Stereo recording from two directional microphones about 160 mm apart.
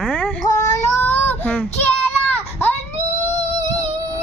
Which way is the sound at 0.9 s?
15° left (ahead or behind).